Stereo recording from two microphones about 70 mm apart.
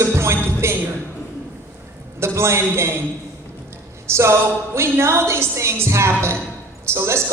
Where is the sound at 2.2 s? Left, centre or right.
Right.